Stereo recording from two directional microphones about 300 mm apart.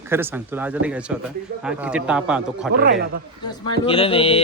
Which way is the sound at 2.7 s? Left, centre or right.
Right.